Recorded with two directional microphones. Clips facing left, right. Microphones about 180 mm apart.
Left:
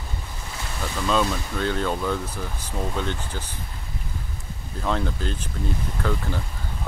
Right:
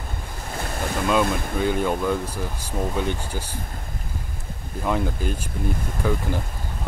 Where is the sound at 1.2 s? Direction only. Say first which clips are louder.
Right 3 dB; 50° right (ahead or behind).